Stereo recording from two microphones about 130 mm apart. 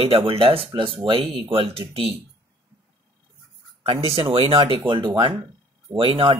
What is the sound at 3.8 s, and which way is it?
Speech, 45° right (ahead or behind).